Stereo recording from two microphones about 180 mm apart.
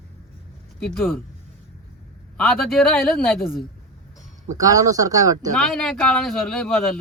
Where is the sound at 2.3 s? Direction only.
Centre (ahead or behind).